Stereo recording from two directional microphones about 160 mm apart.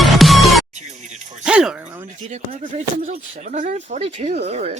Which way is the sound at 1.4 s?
5° right (ahead or behind).